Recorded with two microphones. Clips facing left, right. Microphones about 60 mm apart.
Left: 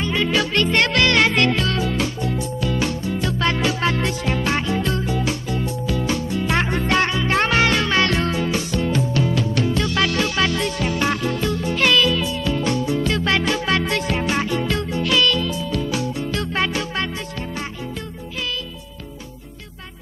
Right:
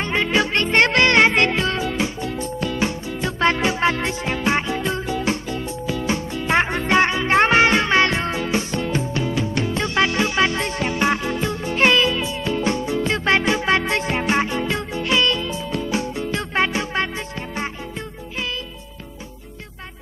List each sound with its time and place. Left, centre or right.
0.0 s music: right